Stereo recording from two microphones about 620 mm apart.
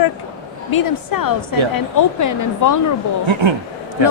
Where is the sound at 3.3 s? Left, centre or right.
Right.